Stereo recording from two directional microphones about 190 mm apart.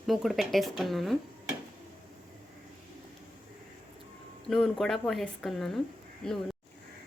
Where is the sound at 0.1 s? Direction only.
Centre (ahead or behind).